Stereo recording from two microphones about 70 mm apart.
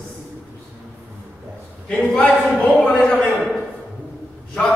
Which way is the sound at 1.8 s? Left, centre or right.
Centre.